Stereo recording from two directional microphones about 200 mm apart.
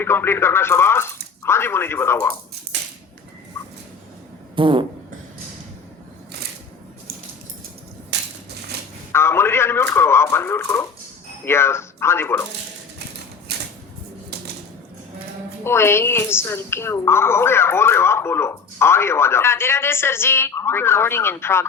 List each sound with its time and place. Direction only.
0.0 s a woman's voice: 10° left (ahead or behind)
4.5 s fart: 25° right (ahead or behind)
8.1 s crushing: 60° right (ahead or behind)
9.1 s a sound: 10° left (ahead or behind)
11.4 s a woman's voice: 10° left (ahead or behind)
13.5 s a sound: 55° right (ahead or behind)
15.6 s a woman's voice: 10° left (ahead or behind)